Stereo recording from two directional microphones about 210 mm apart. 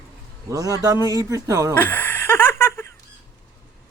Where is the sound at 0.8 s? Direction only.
15° right (ahead or behind).